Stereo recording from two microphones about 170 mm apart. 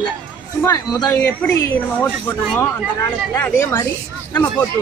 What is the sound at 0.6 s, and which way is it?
A woman's voice, 20° left (ahead or behind).